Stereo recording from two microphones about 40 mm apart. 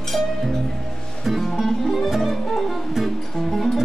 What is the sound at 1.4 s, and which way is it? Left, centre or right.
Music, centre.